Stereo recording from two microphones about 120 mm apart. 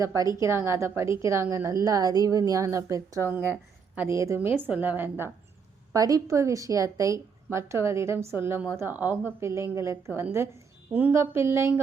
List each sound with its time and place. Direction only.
0.0 s a woman's voice: 30° right (ahead or behind)
5.9 s a woman's voice: 30° right (ahead or behind)